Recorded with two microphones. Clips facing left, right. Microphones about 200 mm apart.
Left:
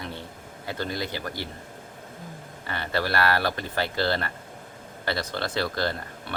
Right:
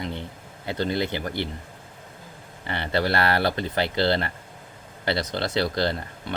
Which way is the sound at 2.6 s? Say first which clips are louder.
Right 3 dB; 25° right (ahead or behind).